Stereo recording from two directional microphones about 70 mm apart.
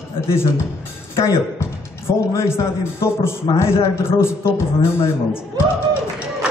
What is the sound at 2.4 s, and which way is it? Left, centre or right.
A man's voice, left.